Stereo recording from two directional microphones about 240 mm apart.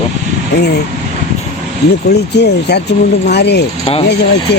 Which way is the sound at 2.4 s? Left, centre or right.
Left.